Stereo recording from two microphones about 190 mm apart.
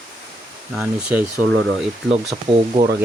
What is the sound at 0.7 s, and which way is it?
Speech, 5° right (ahead or behind).